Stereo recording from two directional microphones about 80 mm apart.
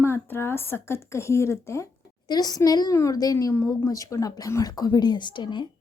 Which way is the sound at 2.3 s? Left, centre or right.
Left.